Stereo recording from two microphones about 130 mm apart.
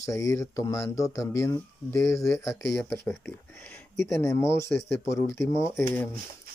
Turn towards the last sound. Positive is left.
turn(degrees=15)  # may be behind; listen again after turning